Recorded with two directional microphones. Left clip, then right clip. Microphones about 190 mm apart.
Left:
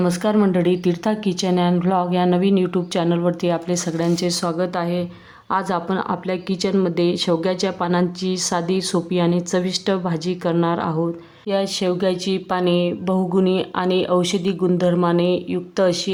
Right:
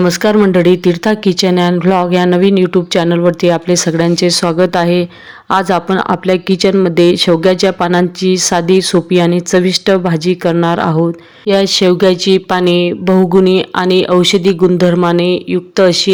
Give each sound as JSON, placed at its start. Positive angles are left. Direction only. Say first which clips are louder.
{"t": 0.0, "sound": "speech", "louder": "right 9 dB", "side_deg": -25}